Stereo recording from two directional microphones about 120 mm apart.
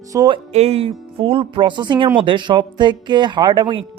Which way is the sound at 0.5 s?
60° right (ahead or behind).